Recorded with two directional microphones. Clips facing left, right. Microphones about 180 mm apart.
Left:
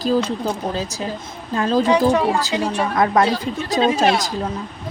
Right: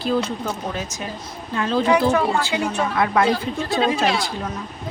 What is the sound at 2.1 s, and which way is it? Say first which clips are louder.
Speech: left 2 dB; 15° left (ahead or behind).